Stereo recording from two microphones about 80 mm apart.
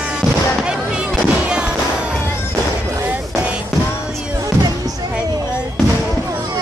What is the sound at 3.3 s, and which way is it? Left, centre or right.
Music, centre.